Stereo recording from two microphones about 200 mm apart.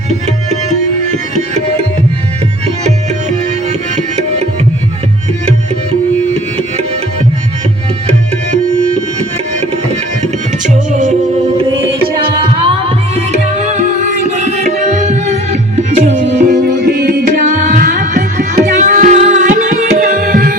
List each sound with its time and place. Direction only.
2.8 s tabla: 35° right (ahead or behind)
13.7 s music: 35° right (ahead or behind)
16.5 s music: 50° right (ahead or behind)